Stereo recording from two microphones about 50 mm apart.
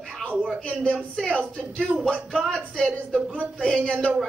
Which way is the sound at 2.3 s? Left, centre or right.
Centre.